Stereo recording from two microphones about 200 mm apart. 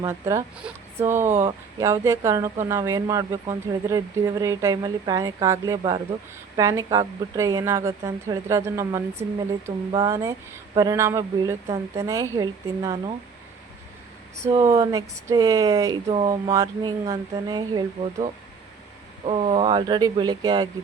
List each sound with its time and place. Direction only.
0.0 s speech: 15° right (ahead or behind)
14.5 s speech: 20° right (ahead or behind)
16.0 s speech: 35° right (ahead or behind)
16.3 s speech: 20° right (ahead or behind)